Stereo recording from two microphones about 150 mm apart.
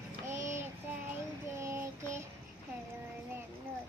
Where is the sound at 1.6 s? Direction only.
20° right (ahead or behind).